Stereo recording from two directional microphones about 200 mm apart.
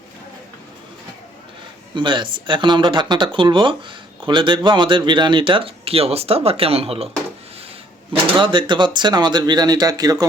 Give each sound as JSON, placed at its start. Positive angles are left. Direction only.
{"t": 2.0, "sound": "speech", "side_deg": -25}
{"t": 8.4, "sound": "speech", "side_deg": -25}